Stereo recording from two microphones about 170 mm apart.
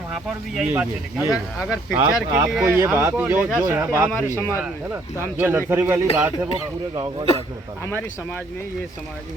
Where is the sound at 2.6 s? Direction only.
15° right (ahead or behind).